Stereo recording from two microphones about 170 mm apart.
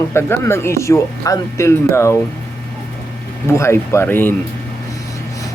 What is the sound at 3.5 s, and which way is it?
Speech, 15° left (ahead or behind).